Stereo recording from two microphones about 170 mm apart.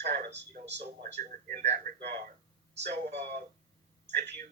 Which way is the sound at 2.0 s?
75° right (ahead or behind).